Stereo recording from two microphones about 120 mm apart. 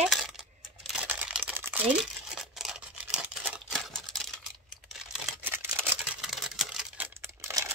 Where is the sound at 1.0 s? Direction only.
10° right (ahead or behind).